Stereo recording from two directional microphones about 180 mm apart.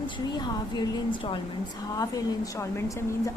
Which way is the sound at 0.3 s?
25° left (ahead or behind).